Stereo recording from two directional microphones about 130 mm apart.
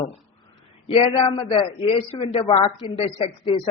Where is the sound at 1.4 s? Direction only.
35° left (ahead or behind).